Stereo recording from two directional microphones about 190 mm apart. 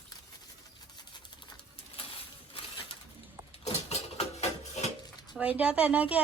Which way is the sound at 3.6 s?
35° left (ahead or behind).